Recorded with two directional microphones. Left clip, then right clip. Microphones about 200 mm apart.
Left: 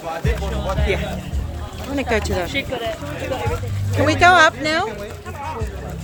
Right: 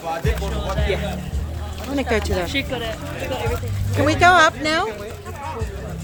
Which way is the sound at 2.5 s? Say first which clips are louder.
Left 1 dB; 55° right (ahead or behind).